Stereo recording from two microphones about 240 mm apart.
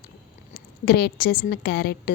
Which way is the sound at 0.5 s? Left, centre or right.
Left.